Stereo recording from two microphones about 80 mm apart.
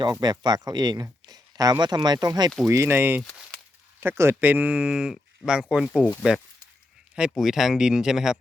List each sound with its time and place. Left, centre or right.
0.0 s speech: right
1.3 s a sound: right
1.8 s speech: right
2.6 s speech: right; by 6.0 s centre
7.2 s speech: centre